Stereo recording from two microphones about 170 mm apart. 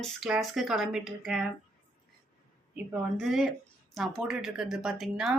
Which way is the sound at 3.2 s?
Centre (ahead or behind).